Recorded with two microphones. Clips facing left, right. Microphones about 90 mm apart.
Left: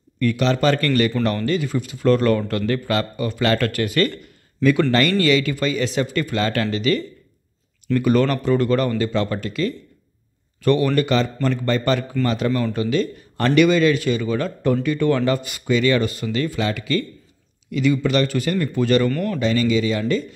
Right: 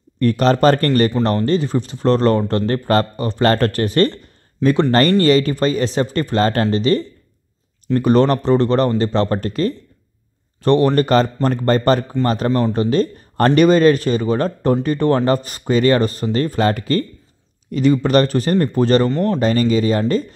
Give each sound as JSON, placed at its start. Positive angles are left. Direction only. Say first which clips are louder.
{"t": 0.2, "sound": "speech", "louder": "right 5 dB", "side_deg": -40}
{"t": 4.6, "sound": "speech", "louder": "right 1 dB", "side_deg": -20}
{"t": 5.2, "sound": "speech", "louder": "right 4 dB", "side_deg": -40}
{"t": 19.0, "sound": "speech", "louder": "right 4 dB", "side_deg": -25}
{"t": 19.4, "sound": "speech", "louder": "right 1 dB", "side_deg": -45}